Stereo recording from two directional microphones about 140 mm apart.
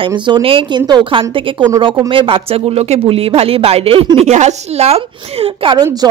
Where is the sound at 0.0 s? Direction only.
35° right (ahead or behind).